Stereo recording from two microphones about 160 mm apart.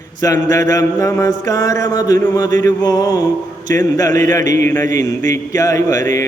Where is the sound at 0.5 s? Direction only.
20° left (ahead or behind).